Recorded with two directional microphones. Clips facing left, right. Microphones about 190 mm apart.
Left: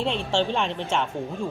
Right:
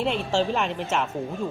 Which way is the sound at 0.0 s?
5° right (ahead or behind).